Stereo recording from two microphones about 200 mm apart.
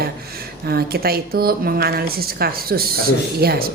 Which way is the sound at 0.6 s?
50° right (ahead or behind).